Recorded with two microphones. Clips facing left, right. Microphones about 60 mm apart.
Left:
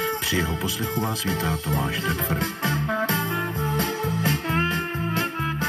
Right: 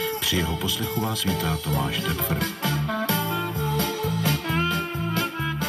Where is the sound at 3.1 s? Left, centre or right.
Left.